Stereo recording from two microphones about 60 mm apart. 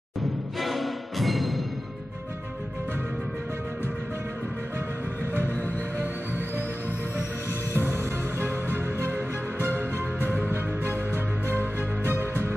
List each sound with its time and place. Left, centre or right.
0.6 s music: centre
7.8 s music: right